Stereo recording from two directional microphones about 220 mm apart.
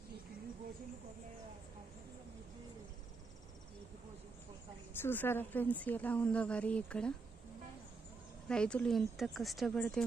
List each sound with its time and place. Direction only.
5.0 s speech: 10° left (ahead or behind)
8.4 s speech: 5° left (ahead or behind)